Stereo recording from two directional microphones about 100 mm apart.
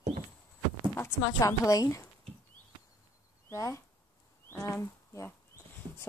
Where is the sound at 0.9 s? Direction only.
25° left (ahead or behind).